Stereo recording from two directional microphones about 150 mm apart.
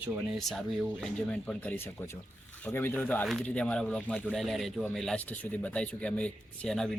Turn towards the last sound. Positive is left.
turn(degrees=5)  # may be behind; listen again after turning